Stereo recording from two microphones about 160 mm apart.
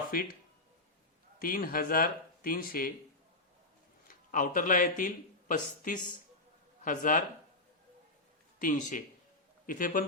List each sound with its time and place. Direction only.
0.1 s speech: 65° left (ahead or behind)
1.4 s speech: 60° left (ahead or behind)
4.1 s speech: 55° left (ahead or behind)
8.5 s speech: 55° left (ahead or behind)